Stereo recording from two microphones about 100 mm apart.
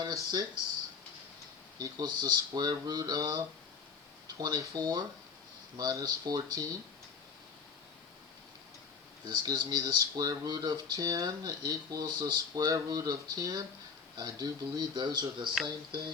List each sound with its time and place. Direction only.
0.3 s speech: 40° right (ahead or behind)
1.8 s speech: 40° right (ahead or behind)
9.2 s speech: 40° right (ahead or behind)